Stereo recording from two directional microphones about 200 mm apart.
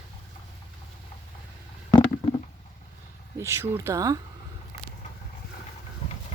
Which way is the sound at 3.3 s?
15° right (ahead or behind).